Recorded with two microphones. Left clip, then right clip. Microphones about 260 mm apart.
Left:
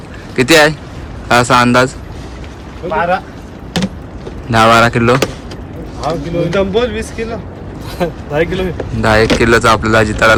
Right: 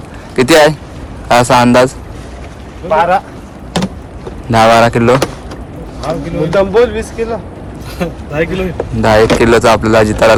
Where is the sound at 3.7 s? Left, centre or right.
Centre.